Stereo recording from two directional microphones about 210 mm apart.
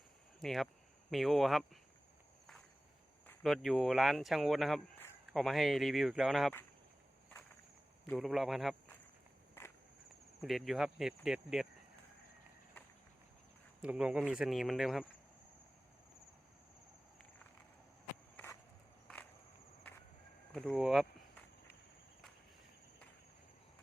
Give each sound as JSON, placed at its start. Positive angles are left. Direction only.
{"t": 0.3, "sound": "speech", "side_deg": 0}
{"t": 3.2, "sound": "speech", "side_deg": 0}
{"t": 8.0, "sound": "speech", "side_deg": 5}
{"t": 9.6, "sound": "walk", "side_deg": 10}
{"t": 10.4, "sound": "speech", "side_deg": 0}
{"t": 13.8, "sound": "speech", "side_deg": -5}
{"t": 19.0, "sound": "a sound", "side_deg": 5}
{"t": 20.5, "sound": "speech", "side_deg": 0}